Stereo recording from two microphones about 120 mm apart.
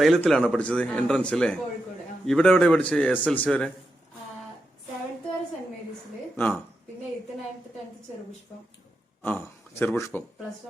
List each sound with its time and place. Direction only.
0.0 s a man's voice: centre (ahead or behind)
6.3 s speech: 15° left (ahead or behind)
9.2 s a man's voice: 15° left (ahead or behind)